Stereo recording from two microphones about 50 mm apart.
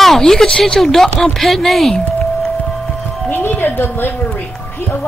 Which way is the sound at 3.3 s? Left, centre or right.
Left.